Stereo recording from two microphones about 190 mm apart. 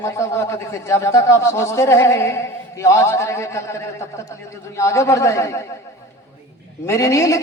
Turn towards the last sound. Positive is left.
turn(degrees=15)  # may be behind; listen again after turning